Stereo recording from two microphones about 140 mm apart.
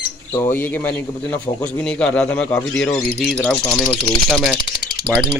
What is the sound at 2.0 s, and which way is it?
Speech, 10° left (ahead or behind).